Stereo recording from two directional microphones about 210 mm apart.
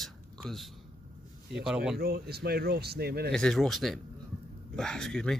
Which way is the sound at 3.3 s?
Centre (ahead or behind).